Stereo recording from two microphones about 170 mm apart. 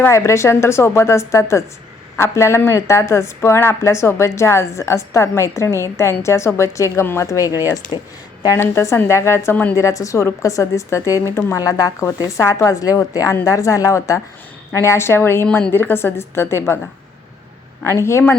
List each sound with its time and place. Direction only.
0.0 s a woman's voice: 15° left (ahead or behind)
8.4 s a woman's voice: 15° left (ahead or behind)
17.8 s a woman's voice: 15° left (ahead or behind)